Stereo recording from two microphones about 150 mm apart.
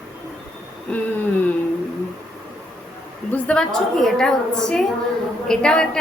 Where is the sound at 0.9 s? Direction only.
10° left (ahead or behind).